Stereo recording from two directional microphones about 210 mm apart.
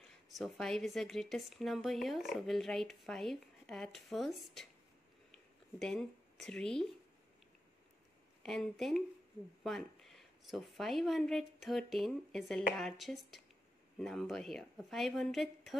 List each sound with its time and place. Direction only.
0.3 s speech: centre (ahead or behind)
5.3 s a sound: centre (ahead or behind)
8.4 s speech: centre (ahead or behind)